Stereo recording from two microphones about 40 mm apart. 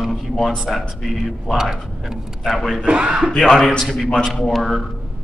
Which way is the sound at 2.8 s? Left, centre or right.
Right.